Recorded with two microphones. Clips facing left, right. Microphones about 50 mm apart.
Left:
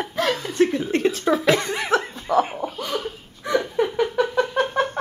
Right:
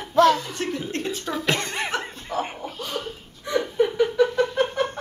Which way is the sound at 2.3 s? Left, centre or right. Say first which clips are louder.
Left 8 dB; left.